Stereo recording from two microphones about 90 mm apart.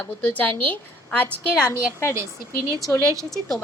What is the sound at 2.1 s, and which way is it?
Speech, 35° right (ahead or behind).